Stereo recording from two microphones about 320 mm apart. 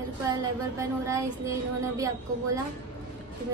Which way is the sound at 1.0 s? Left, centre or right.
Centre.